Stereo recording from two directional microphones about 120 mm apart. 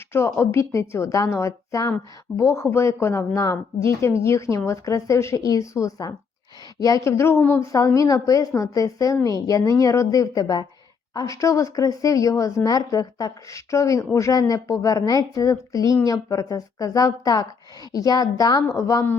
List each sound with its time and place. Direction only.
0.1 s a woman's voice: 20° left (ahead or behind)